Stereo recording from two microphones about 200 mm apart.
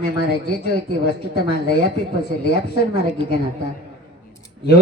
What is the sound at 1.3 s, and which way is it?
Speech, 50° left (ahead or behind).